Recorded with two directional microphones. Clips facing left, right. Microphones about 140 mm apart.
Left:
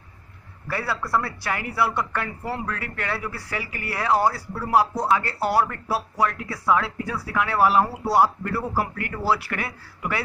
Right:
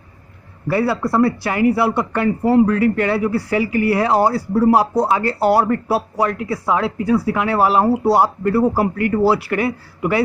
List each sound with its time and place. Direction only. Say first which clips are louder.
0.8 s speech: right 5 dB; 30° right (ahead or behind)
1.2 s speech: right 14 dB; 15° right (ahead or behind)
4.1 s speech: right 6 dB; 30° right (ahead or behind)
6.5 s speech: right 4 dB; 25° right (ahead or behind)
9.5 s speech: right 11 dB; 20° right (ahead or behind)